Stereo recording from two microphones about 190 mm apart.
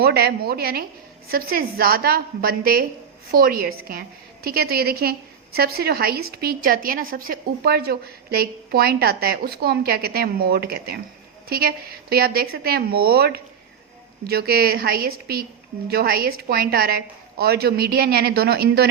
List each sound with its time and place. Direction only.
0.0 s a woman's voice: 55° right (ahead or behind)